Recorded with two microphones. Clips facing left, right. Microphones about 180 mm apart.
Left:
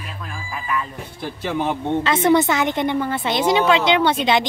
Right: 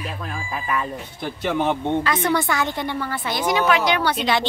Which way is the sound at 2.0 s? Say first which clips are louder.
Left 5 dB; 25° left (ahead or behind).